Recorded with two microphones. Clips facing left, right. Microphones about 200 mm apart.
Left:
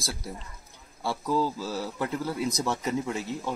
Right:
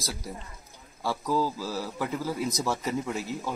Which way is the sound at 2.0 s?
5° right (ahead or behind).